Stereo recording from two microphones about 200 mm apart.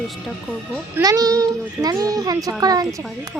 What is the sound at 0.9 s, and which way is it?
A woman's voice, 15° right (ahead or behind).